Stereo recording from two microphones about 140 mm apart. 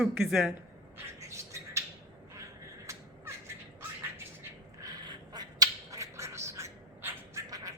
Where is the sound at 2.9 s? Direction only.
20° right (ahead or behind).